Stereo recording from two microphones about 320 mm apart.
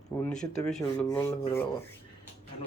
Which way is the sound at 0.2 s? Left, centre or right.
Centre.